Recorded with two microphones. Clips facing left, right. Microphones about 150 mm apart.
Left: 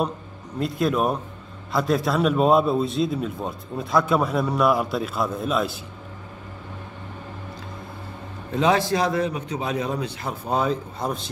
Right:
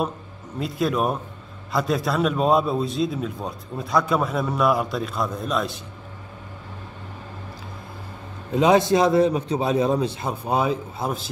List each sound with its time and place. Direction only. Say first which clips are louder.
0.6 s a man's voice: left 1 dB; centre (ahead or behind)
8.5 s a man's voice: right 3 dB; 15° right (ahead or behind)
10.4 s speech: even; 10° right (ahead or behind)